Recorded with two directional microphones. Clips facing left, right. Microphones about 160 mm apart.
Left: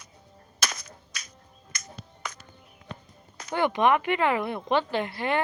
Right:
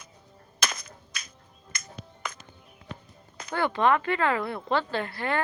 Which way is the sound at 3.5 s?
15° left (ahead or behind).